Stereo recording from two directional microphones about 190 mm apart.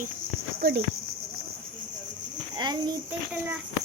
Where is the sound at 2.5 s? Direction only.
20° right (ahead or behind).